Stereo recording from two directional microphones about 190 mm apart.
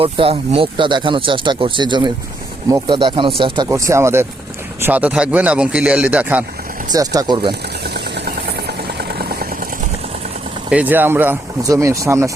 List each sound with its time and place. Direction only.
0.0 s speech: 30° right (ahead or behind); by 6.4 s 10° right (ahead or behind)
6.9 s speech: 20° right (ahead or behind)
7.9 s vehicle: 60° right (ahead or behind)
10.7 s speech: 10° right (ahead or behind)